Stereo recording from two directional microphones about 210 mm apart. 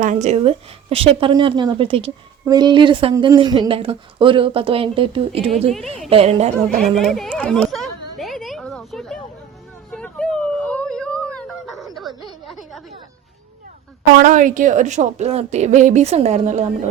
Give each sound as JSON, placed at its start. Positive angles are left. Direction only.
{"t": 0.0, "sound": "a woman's voice", "side_deg": -35}
{"t": 6.9, "sound": "a sound", "side_deg": 0}
{"t": 14.2, "sound": "a woman's voice", "side_deg": -40}